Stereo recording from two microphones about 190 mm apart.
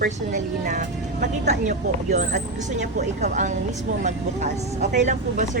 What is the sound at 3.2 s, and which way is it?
Speech, 40° right (ahead or behind).